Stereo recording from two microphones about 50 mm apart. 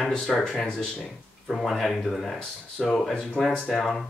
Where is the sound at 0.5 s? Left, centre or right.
Centre.